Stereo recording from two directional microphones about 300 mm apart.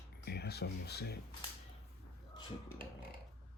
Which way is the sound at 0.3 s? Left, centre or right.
Left.